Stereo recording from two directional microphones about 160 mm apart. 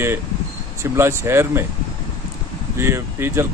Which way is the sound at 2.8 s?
15° right (ahead or behind).